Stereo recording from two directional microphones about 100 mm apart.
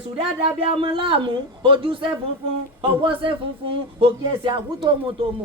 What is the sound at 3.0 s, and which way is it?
Speech, 60° right (ahead or behind).